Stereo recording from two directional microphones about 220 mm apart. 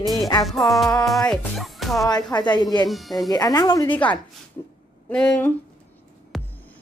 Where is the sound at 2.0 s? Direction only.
20° left (ahead or behind).